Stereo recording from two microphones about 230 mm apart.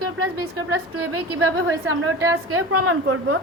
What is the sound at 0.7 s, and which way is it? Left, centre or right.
A woman's voice, right.